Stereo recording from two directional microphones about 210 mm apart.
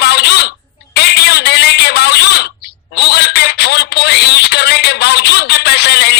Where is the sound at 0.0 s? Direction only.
50° left (ahead or behind).